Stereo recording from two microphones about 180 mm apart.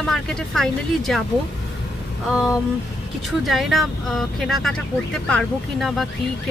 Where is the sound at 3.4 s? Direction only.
Centre (ahead or behind).